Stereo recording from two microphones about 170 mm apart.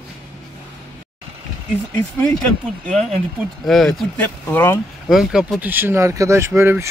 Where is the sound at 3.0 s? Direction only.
40° right (ahead or behind).